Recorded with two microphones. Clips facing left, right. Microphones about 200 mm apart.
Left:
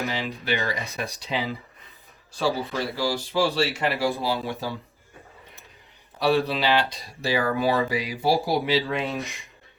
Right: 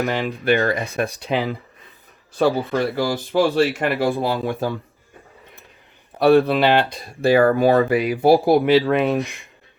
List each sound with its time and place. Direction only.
0.0 s speech: 55° right (ahead or behind)
6.1 s speech: 55° right (ahead or behind)